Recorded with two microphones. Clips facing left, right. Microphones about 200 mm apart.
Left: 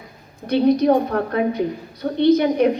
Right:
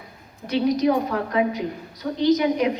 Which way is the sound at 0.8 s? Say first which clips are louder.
Left 4 dB; 60° left (ahead or behind).